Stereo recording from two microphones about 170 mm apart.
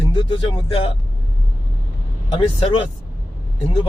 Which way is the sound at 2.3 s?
35° left (ahead or behind).